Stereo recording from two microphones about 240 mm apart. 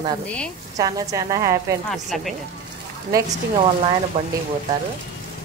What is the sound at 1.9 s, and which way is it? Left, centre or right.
Speech, centre.